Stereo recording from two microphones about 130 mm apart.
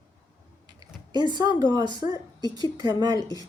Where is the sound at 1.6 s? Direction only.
30° right (ahead or behind).